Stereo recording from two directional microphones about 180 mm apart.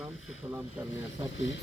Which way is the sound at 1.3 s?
90° left.